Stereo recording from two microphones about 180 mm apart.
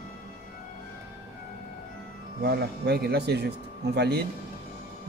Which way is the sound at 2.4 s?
60° right (ahead or behind).